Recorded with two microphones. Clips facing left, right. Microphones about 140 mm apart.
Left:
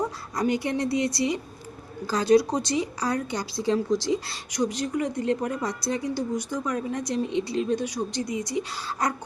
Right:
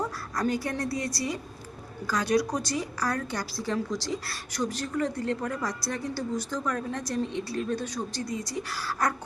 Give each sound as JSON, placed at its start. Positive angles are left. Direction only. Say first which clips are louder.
{"t": 0.0, "sound": "a woman's voice", "louder": "left 3 dB", "side_deg": 15}